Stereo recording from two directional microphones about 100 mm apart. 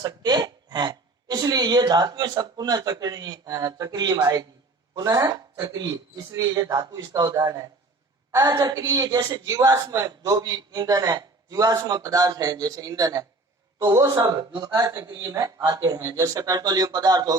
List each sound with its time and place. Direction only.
0.0 s a woman's voice: 45° right (ahead or behind)